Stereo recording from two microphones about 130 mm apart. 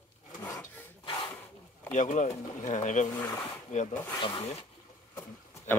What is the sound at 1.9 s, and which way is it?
Speech, 70° left (ahead or behind).